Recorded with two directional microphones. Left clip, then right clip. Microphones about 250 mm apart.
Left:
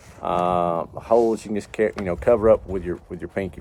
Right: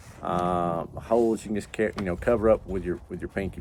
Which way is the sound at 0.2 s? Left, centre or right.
Left.